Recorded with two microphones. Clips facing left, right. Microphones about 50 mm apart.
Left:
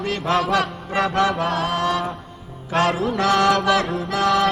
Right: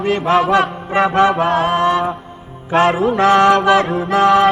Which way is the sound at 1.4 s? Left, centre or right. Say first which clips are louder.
Right 7 dB; centre.